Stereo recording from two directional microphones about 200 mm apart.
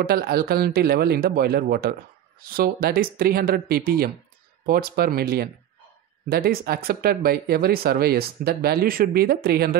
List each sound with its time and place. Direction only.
0.0 s speech: 50° right (ahead or behind)